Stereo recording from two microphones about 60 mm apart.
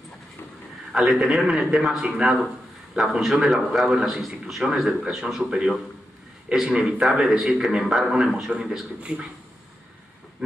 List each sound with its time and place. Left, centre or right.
0.9 s a man's voice: centre
9.1 s speech: right